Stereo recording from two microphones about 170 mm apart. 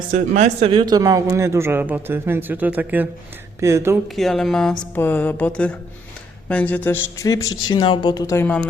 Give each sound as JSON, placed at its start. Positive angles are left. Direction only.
{"t": 0.6, "sound": "speech", "side_deg": -30}
{"t": 4.1, "sound": "speech", "side_deg": 0}